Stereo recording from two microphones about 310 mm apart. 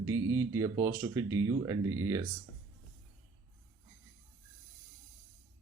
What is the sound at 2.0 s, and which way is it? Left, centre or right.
Speech, centre.